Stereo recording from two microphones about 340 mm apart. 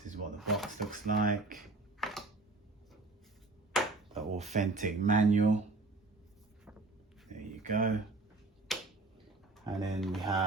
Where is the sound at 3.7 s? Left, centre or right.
Centre.